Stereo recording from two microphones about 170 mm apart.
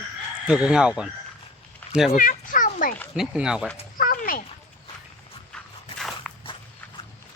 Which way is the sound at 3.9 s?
55° left (ahead or behind).